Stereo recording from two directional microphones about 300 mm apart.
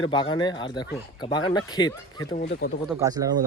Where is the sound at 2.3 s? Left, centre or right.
Left.